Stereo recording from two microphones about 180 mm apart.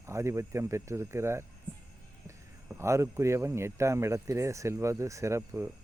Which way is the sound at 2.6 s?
15° right (ahead or behind).